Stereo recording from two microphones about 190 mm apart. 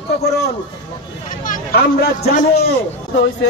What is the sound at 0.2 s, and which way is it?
Speech, 55° left (ahead or behind).